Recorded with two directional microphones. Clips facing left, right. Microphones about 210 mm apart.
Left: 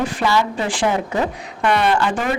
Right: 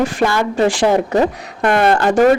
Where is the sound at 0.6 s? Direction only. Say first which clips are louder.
Right 9 dB; 75° right (ahead or behind).